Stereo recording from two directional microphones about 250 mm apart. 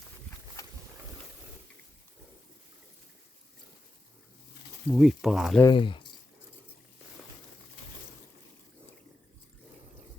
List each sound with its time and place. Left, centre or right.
0.6 s boat: centre
4.9 s speech: centre
5.6 s speech: centre